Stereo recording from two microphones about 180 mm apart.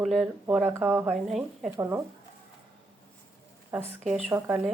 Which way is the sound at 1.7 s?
15° right (ahead or behind).